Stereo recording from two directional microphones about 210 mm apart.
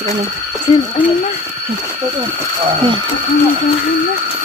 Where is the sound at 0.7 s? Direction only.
30° left (ahead or behind).